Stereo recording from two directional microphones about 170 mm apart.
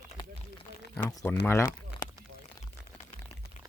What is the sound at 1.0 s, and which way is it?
Speech, 10° left (ahead or behind).